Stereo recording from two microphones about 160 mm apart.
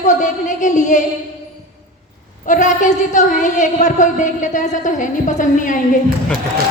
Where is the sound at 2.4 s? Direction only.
50° left (ahead or behind).